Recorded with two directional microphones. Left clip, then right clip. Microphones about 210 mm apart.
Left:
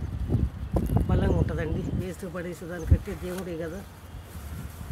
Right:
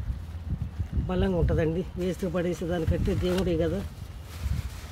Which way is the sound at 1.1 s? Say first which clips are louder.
Right 6 dB; 40° right (ahead or behind).